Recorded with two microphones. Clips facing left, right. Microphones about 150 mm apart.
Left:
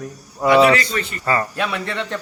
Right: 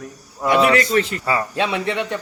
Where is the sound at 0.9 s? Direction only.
90° right.